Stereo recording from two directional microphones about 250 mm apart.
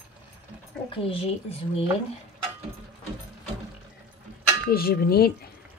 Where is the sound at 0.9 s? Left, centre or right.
Left.